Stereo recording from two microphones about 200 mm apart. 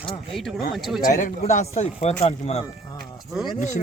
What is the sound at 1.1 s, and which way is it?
Speech, 40° left (ahead or behind).